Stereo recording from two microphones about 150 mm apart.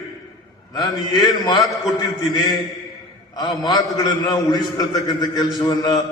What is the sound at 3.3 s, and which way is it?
A man's voice, 25° left (ahead or behind).